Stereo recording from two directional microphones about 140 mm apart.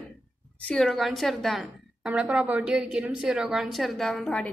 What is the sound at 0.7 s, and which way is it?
A woman's voice, centre (ahead or behind).